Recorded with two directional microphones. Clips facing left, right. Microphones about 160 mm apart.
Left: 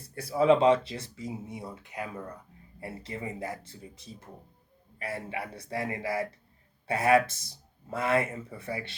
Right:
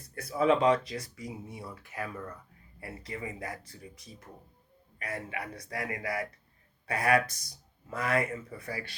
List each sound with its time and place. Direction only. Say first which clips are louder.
0.1 s speech: left 3 dB; 30° left (ahead or behind)